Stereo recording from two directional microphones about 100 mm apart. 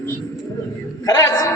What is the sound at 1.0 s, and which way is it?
Speech, 40° left (ahead or behind).